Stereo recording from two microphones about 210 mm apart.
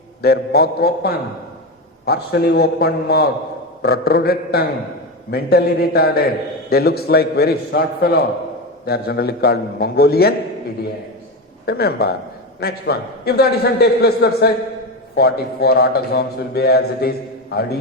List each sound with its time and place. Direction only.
0.2 s a man's voice: 50° left (ahead or behind)
11.6 s a man's voice: 50° left (ahead or behind)